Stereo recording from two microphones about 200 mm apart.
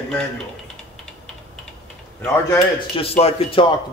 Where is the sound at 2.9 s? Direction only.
30° left (ahead or behind).